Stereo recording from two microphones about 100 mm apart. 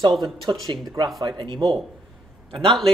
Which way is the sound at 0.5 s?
45° right (ahead or behind).